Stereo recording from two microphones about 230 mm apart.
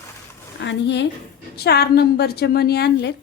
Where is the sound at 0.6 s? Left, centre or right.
Left.